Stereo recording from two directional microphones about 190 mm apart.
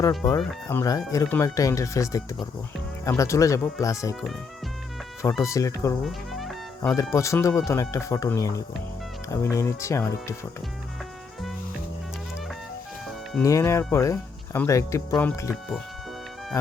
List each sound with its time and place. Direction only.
0.2 s speech: 15° left (ahead or behind)
5.4 s speech: 15° left (ahead or behind)
6.0 s music: centre (ahead or behind)
6.9 s speech: 15° left (ahead or behind)
13.4 s speech: 15° left (ahead or behind)